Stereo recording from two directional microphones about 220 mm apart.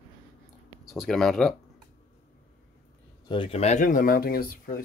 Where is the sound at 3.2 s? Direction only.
25° left (ahead or behind); by 4.8 s 40° left (ahead or behind).